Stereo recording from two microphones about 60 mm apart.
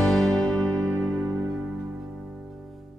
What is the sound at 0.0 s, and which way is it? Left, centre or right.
Music, centre.